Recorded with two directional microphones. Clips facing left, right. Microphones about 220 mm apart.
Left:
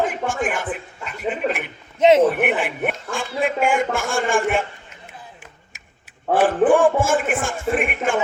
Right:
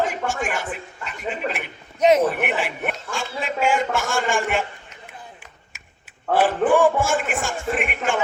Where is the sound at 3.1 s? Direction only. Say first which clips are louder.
Left 5 dB; 55° left (ahead or behind).